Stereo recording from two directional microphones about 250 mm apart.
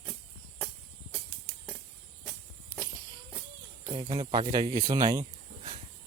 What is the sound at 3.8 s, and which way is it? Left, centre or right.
Speech, centre.